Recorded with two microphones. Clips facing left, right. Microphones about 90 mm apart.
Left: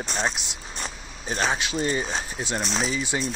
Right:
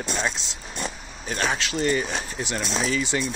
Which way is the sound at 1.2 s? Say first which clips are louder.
Even; 25° left (ahead or behind).